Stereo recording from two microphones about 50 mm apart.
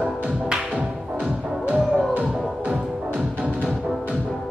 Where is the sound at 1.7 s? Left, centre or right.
Right.